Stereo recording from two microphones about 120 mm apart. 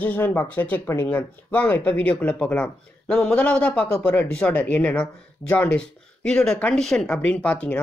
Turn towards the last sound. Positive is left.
turn(degrees=10)  # may be behind; listen again after turning